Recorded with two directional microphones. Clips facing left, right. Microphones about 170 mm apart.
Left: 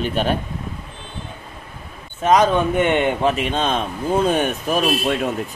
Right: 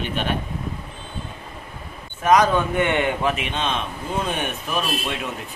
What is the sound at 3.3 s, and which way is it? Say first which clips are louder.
A man's voice: left 5 dB; 40° left (ahead or behind).